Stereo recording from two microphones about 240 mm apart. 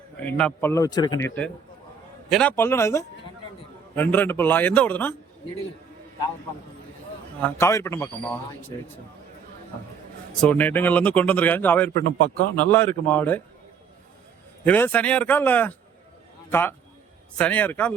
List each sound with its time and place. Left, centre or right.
0.2 s a man's voice: centre
2.3 s a man's voice: centre
7.4 s a man's voice: centre
10.4 s a man's voice: centre
14.6 s a man's voice: centre